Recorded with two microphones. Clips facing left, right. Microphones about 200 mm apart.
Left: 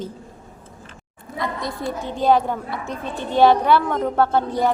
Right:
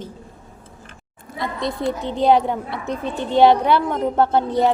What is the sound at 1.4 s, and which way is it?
A woman's voice, 20° right (ahead or behind).